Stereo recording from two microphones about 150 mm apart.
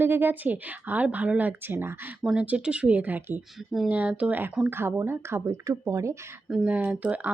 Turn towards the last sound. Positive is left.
turn(degrees=-10)  # may be behind; listen again after turning